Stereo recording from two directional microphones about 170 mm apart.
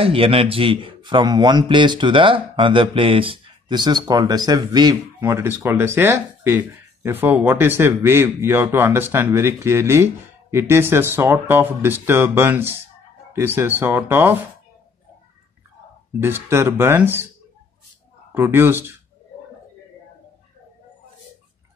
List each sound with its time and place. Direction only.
0.0 s a man's voice: 35° right (ahead or behind); by 14.4 s 15° right (ahead or behind)
16.2 s speech: 15° right (ahead or behind)
18.3 s speech: 15° right (ahead or behind)